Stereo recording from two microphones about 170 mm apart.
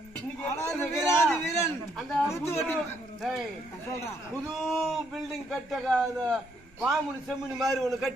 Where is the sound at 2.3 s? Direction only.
15° left (ahead or behind).